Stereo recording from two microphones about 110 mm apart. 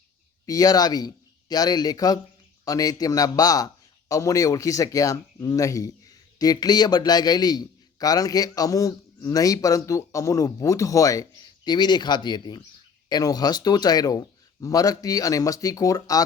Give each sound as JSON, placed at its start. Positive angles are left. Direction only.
{"t": 0.4, "sound": "a man's voice", "side_deg": 35}